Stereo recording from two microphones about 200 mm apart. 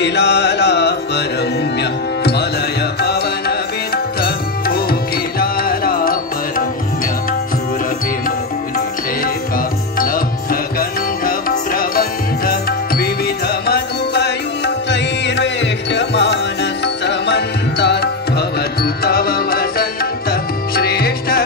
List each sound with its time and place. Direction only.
0.0 s music: 55° left (ahead or behind)
9.9 s music: 45° left (ahead or behind)